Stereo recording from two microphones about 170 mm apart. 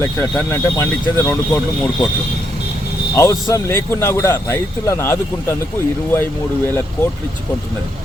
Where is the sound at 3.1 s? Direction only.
15° left (ahead or behind).